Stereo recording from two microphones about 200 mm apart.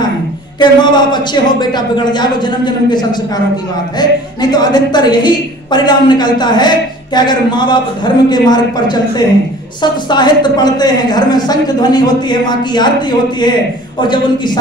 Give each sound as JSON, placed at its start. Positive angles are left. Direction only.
{"t": 0.6, "sound": "a woman's voice", "side_deg": 20}